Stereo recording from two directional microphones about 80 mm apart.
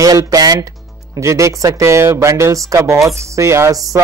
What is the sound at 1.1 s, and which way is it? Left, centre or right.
Speech, right.